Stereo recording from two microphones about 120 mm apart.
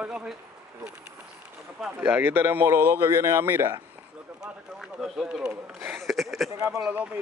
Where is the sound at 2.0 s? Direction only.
15° right (ahead or behind).